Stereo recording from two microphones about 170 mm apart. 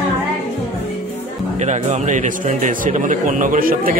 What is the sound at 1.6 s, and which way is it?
A man's voice, 40° right (ahead or behind).